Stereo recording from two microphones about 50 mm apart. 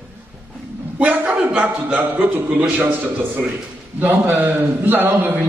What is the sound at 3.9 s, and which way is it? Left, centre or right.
A man's voice, right.